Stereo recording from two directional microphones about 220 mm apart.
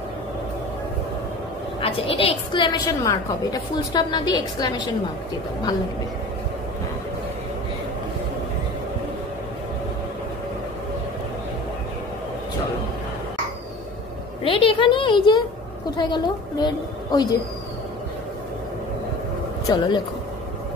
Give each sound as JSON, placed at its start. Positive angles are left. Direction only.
{"t": 1.8, "sound": "a woman's voice", "side_deg": 25}
{"t": 14.4, "sound": "a woman's voice", "side_deg": 25}
{"t": 19.6, "sound": "speech", "side_deg": 20}